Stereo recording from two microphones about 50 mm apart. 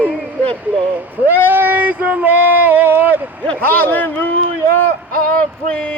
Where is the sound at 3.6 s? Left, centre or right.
Left.